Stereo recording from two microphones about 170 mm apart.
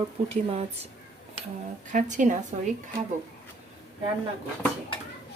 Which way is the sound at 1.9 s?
50° right (ahead or behind).